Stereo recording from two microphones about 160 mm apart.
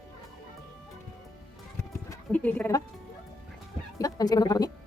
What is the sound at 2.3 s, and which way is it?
Speech, 10° left (ahead or behind).